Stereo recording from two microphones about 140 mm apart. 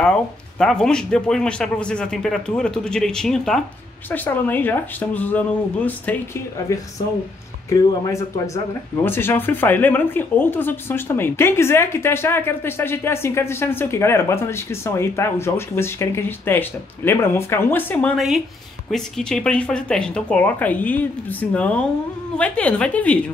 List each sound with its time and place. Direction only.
0.0 s speech: 5° left (ahead or behind)
7.7 s speech: 30° left (ahead or behind); by 18.1 s 15° left (ahead or behind)
18.1 s speech: centre (ahead or behind)